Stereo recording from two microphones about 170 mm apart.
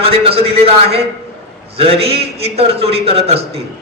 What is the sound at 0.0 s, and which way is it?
A man's voice, 35° right (ahead or behind).